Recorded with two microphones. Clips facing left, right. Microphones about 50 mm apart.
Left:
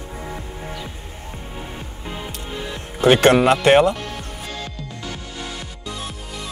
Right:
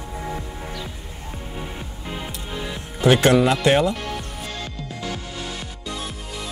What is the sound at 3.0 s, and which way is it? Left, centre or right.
Speech, left.